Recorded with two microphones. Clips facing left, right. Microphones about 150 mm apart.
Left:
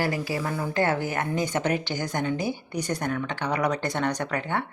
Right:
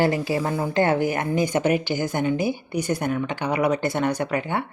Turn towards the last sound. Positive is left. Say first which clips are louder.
# right 3 dB
turn(degrees=-10)  # may be behind; listen again after turning